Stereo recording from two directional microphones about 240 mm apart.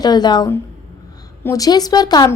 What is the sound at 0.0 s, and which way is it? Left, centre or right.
A woman's voice, centre.